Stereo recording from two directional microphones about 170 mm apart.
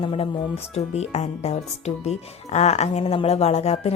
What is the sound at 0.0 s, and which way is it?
Speech, 35° left (ahead or behind).